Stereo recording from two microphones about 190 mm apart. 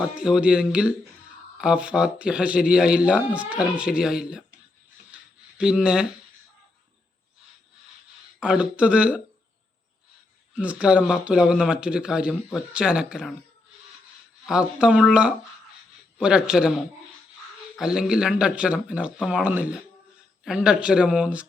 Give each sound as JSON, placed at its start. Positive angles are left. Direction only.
{"t": 0.0, "sound": "speech", "side_deg": -5}
{"t": 5.1, "sound": "a sound", "side_deg": -5}
{"t": 8.4, "sound": "speech", "side_deg": -5}
{"t": 10.5, "sound": "speech", "side_deg": -5}
{"t": 14.4, "sound": "speech", "side_deg": -5}
{"t": 17.7, "sound": "speech", "side_deg": -5}